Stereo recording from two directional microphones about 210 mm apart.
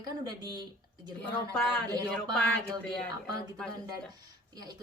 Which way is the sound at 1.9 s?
15° right (ahead or behind).